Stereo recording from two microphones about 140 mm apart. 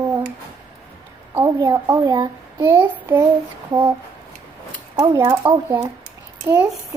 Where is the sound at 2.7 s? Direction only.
15° right (ahead or behind).